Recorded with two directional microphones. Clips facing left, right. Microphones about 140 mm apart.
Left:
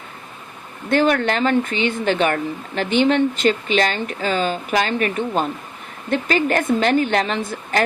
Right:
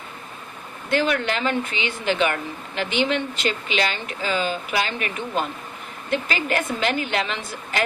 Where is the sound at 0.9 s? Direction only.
50° left (ahead or behind).